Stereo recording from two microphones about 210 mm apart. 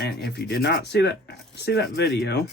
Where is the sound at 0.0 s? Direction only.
50° left (ahead or behind).